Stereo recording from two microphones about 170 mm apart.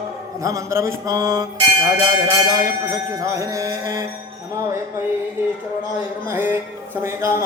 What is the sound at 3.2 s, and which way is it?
Mantra, 20° right (ahead or behind).